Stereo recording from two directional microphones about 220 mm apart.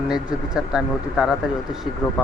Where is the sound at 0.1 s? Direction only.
5° right (ahead or behind).